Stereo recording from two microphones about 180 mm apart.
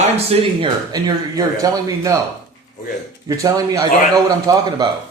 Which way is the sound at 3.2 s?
20° right (ahead or behind).